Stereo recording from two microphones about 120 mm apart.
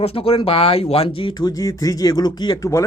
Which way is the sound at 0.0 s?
55° left (ahead or behind).